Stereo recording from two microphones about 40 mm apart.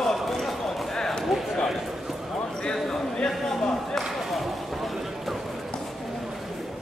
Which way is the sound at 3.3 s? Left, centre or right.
Centre.